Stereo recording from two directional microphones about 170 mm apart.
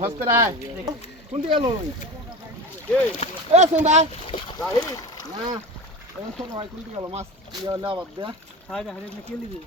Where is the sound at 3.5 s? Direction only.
45° right (ahead or behind).